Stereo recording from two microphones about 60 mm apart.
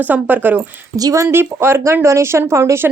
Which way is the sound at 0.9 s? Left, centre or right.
Right.